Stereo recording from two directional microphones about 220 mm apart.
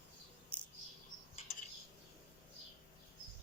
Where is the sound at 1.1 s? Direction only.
65° left (ahead or behind).